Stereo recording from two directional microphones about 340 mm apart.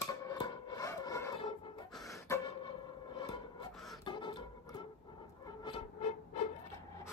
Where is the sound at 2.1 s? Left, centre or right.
Centre.